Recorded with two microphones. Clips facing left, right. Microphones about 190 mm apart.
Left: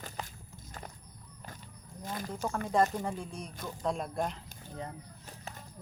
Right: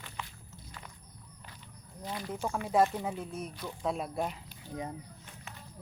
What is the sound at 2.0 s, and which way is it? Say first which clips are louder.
Speech: even; 45° left (ahead or behind).